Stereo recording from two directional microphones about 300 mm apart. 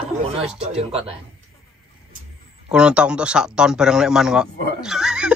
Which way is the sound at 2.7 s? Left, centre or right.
Centre.